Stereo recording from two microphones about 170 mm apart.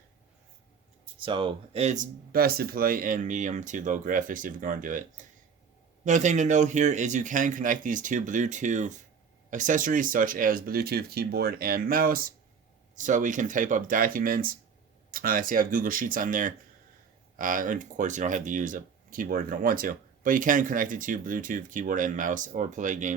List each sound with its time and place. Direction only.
1.2 s speech: 30° right (ahead or behind)
2.3 s speech: 60° right (ahead or behind); by 23.1 s 45° right (ahead or behind)